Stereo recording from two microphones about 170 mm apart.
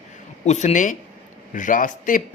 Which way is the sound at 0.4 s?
45° left (ahead or behind).